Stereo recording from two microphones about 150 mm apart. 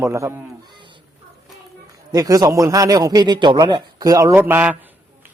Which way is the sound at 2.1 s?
25° right (ahead or behind).